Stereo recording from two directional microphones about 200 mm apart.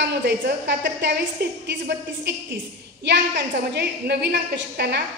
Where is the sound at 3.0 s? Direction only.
55° right (ahead or behind).